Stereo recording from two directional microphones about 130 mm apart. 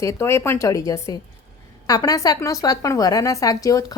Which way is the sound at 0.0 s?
20° left (ahead or behind).